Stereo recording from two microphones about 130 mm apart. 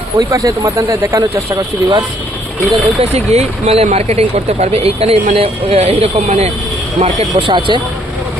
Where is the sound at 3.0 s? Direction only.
55° right (ahead or behind).